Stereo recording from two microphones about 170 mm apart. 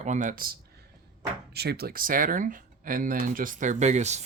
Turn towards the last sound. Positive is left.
turn(degrees=-40)  # may be behind; listen again after turning